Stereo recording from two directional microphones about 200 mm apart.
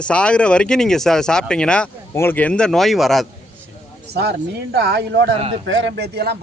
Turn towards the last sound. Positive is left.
turn(degrees=-55)  # may be behind; listen again after turning